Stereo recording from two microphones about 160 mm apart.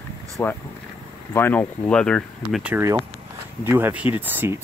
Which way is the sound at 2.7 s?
20° right (ahead or behind).